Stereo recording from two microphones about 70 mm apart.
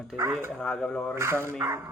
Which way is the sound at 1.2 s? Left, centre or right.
Right.